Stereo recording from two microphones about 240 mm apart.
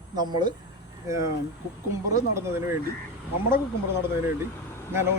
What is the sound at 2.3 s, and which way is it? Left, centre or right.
Speech, centre.